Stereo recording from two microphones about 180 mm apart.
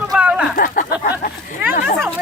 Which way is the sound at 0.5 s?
50° left (ahead or behind).